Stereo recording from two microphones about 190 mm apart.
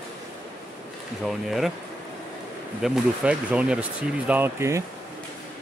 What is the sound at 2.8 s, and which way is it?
Speech, 5° right (ahead or behind).